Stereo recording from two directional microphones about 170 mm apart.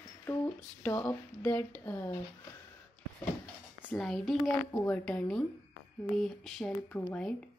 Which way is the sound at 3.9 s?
5° left (ahead or behind).